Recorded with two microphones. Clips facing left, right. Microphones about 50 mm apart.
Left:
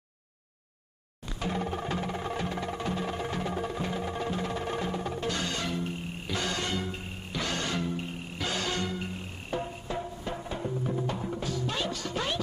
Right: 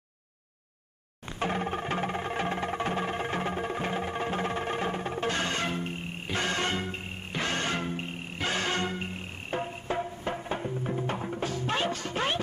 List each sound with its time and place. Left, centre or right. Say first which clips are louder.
1.4 s music: right 2 dB; right